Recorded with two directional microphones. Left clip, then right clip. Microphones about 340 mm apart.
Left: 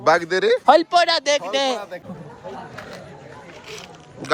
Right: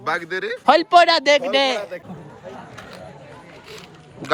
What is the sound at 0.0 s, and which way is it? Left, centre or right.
Speech, centre.